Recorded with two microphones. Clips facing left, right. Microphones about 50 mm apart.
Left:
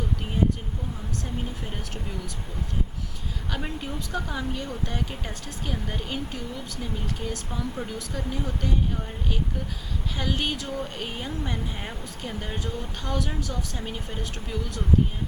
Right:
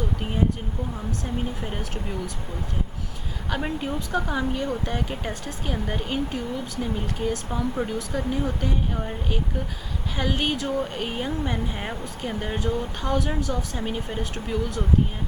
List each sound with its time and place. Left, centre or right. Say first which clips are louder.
1.6 s speech: right 4 dB; centre
3.5 s speech: right 6 dB; centre